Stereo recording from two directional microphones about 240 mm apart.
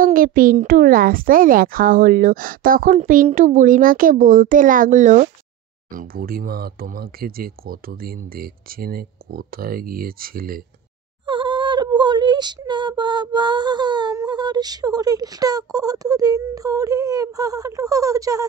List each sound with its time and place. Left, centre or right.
0.0 s a child's voice: right
11.2 s speech: centre